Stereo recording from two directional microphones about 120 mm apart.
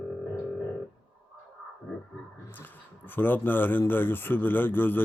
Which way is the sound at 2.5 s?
15° left (ahead or behind).